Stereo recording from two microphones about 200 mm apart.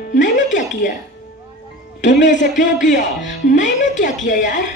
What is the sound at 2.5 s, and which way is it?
Speech, 40° left (ahead or behind).